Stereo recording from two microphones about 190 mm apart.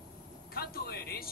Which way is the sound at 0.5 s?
55° left (ahead or behind).